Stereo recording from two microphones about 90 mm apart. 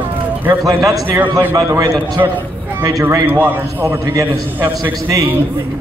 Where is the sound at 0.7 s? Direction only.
40° right (ahead or behind).